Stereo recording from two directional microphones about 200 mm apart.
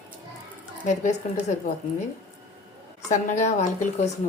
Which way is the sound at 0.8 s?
40° left (ahead or behind).